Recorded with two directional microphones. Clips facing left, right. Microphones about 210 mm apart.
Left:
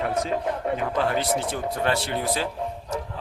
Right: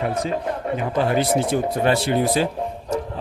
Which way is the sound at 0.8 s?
10° right (ahead or behind).